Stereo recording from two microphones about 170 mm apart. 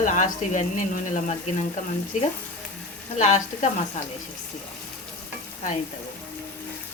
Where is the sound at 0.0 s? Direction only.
50° left (ahead or behind).